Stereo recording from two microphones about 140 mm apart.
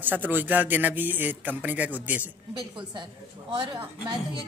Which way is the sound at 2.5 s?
30° right (ahead or behind).